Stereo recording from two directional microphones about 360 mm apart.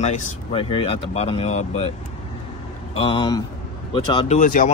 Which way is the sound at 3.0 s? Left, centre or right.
Centre.